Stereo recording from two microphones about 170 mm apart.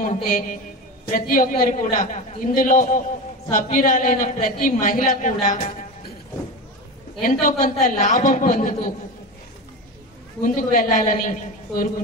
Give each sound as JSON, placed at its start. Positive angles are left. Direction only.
{"t": 0.0, "sound": "a man's voice", "side_deg": 50}
{"t": 7.2, "sound": "a man's voice", "side_deg": 55}
{"t": 10.4, "sound": "a man's voice", "side_deg": 55}